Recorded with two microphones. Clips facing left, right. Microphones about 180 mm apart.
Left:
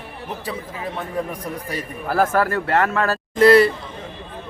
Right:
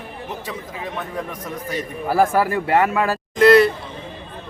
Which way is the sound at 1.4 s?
35° left (ahead or behind).